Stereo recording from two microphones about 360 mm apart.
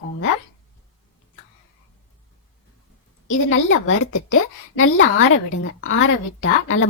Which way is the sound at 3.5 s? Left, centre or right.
Left.